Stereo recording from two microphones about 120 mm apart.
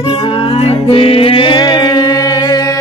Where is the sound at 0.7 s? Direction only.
50° left (ahead or behind); by 2.0 s 35° left (ahead or behind).